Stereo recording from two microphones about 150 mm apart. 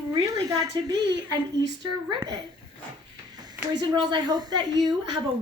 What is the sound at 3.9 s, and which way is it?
Speech, 30° right (ahead or behind).